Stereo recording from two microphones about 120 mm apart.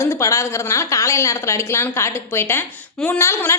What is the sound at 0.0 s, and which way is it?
A woman's voice, 25° left (ahead or behind).